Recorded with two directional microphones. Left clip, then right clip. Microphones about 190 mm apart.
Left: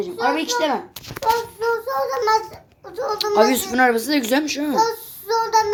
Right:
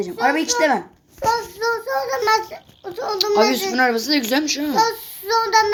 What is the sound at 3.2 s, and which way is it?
Speech, 5° left (ahead or behind).